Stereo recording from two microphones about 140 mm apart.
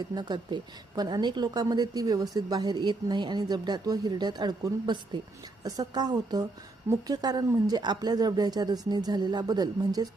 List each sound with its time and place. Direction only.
0.1 s a woman's voice: 30° right (ahead or behind)